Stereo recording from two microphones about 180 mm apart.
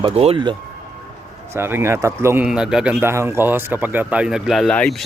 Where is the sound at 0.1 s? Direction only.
35° right (ahead or behind).